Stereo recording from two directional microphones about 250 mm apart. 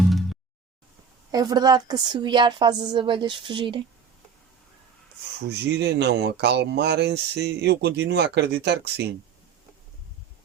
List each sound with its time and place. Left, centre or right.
0.1 s a sound: centre
1.3 s a woman's voice: centre
5.4 s speech: right